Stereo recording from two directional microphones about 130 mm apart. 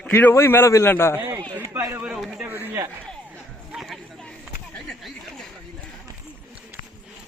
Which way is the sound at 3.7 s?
5° right (ahead or behind).